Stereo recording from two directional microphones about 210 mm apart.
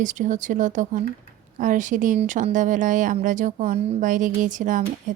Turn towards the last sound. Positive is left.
turn(degrees=-40)  # may be behind; listen again after turning